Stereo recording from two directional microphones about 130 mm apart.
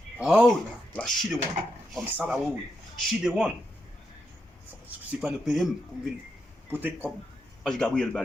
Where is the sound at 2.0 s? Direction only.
15° right (ahead or behind).